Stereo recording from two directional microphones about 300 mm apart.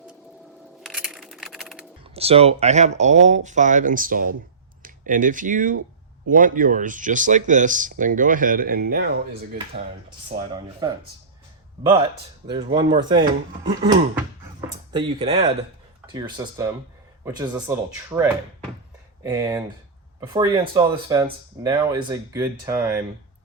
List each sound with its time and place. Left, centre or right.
0.8 s a sound: centre
2.1 s speech: centre
10.5 s speech: centre
14.9 s speech: centre